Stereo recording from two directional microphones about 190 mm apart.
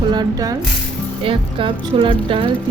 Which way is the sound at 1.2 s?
30° right (ahead or behind).